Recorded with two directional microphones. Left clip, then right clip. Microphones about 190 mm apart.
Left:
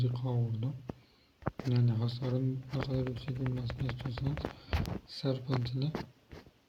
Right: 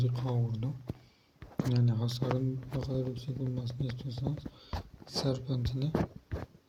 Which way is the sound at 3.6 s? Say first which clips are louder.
Even; 30° right (ahead or behind).